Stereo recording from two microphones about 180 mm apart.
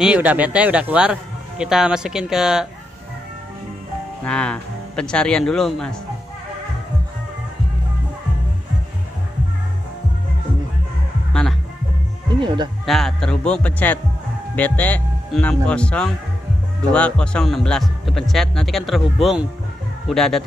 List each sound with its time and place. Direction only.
0.0 s speech: 10° right (ahead or behind)
4.2 s speech: 5° left (ahead or behind)
12.4 s speech: 25° right (ahead or behind)
12.8 s speech: centre (ahead or behind)